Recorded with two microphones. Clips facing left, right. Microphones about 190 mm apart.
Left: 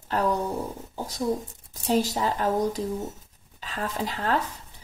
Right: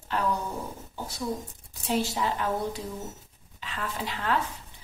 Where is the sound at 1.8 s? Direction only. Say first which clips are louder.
Left 4 dB; 40° left (ahead or behind).